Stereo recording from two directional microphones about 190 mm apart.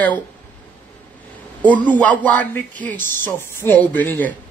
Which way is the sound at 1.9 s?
10° left (ahead or behind).